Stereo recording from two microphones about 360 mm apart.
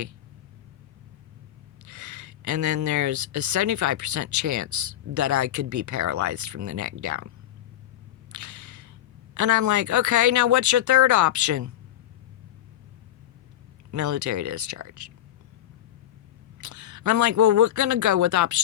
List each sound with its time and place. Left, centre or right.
1.9 s speech: right
8.3 s a sound: right
9.3 s speech: right
13.9 s speech: right
16.6 s speech: right